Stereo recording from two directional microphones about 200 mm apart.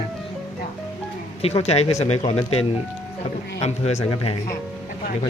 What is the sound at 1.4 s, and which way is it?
Speech, 30° left (ahead or behind).